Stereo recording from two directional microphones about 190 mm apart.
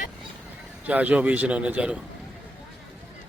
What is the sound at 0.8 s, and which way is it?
A man's voice, 10° right (ahead or behind).